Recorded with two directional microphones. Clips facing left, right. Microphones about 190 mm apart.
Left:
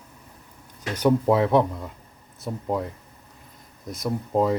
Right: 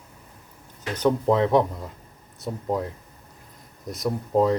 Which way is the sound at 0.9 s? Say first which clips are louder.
Left 1 dB; 10° left (ahead or behind).